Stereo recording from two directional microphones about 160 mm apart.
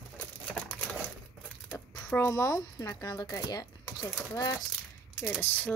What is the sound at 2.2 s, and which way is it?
Speech, 15° left (ahead or behind).